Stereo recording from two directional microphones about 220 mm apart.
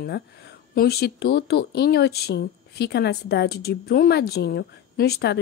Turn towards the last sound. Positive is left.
turn(degrees=50)  # may be behind; listen again after turning